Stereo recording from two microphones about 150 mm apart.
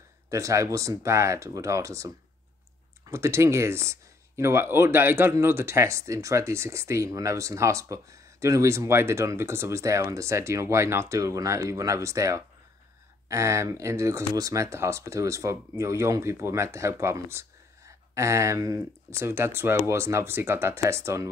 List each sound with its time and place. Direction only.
0.3 s speech: 20° right (ahead or behind)